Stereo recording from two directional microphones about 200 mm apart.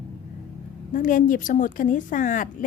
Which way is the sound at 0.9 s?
40° left (ahead or behind).